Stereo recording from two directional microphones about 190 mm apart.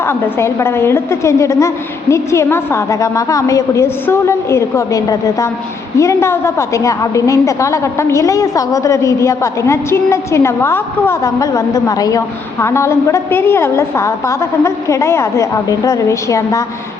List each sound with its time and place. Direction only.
0.1 s a woman's voice: 15° left (ahead or behind)